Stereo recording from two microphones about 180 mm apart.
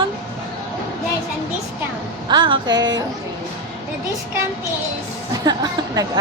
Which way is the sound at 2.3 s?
25° right (ahead or behind).